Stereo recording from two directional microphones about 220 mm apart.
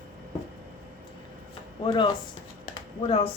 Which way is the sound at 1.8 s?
20° left (ahead or behind).